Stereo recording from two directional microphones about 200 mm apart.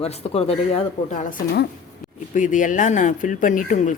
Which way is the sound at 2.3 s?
40° left (ahead or behind).